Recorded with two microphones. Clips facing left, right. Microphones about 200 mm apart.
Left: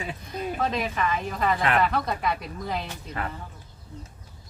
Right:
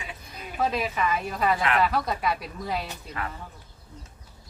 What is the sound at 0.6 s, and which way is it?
A woman's voice, 10° right (ahead or behind).